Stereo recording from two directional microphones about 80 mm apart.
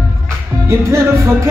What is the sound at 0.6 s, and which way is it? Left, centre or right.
Speech, right.